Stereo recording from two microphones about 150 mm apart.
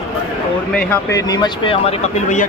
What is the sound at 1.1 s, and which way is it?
Speech, 25° left (ahead or behind).